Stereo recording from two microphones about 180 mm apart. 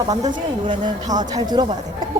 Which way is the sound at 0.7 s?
25° right (ahead or behind).